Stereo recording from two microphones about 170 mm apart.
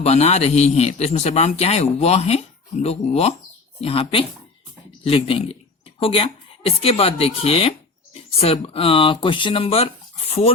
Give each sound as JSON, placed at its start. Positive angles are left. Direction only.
{"t": 0.0, "sound": "a man's voice", "side_deg": 40}